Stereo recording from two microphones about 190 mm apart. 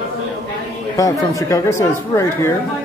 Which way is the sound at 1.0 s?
15° left (ahead or behind).